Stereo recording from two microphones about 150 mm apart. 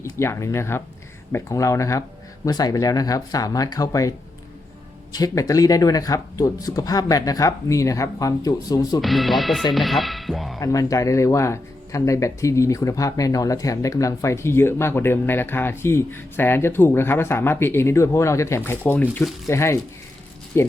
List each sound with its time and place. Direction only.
0.0 s speech: 20° left (ahead or behind)
5.1 s speech: 25° left (ahead or behind)
9.0 s speech: centre (ahead or behind)
10.6 s speech: 25° left (ahead or behind)